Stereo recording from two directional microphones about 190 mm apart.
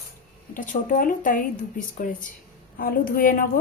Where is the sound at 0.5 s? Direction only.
45° left (ahead or behind).